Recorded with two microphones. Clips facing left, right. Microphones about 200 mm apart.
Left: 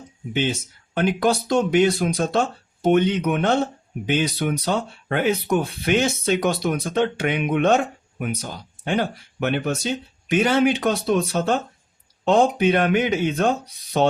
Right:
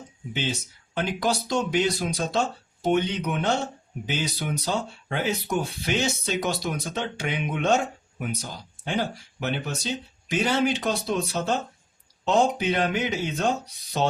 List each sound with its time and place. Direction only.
0.9 s speech: 55° left (ahead or behind)